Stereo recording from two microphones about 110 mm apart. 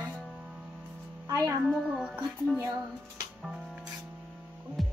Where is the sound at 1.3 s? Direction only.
35° right (ahead or behind).